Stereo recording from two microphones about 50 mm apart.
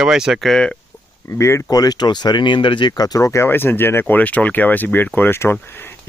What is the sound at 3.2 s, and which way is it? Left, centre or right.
Speech, left.